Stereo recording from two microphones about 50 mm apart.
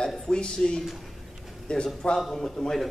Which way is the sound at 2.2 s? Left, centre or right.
Centre.